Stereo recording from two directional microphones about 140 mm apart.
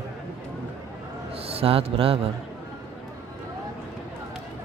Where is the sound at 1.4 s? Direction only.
45° right (ahead or behind).